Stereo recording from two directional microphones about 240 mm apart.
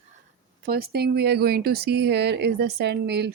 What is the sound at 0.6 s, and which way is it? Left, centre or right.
Speech, right.